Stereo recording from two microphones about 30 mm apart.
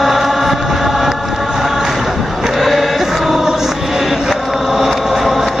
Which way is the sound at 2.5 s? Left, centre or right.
Centre.